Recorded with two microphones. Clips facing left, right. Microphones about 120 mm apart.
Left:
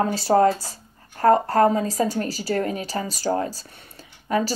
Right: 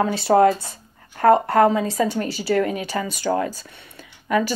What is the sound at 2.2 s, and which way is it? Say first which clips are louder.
Speech: right 3 dB; 35° left (ahead or behind).